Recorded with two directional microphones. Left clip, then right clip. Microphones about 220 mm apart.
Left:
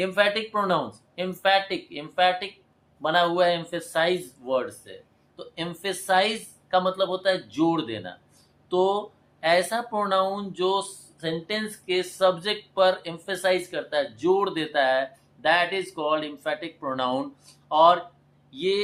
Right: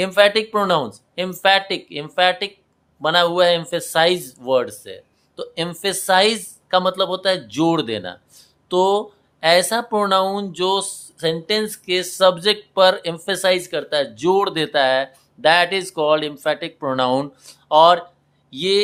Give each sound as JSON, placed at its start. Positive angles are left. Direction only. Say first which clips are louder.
{"t": 0.0, "sound": "speech", "louder": "right 8 dB", "side_deg": -50}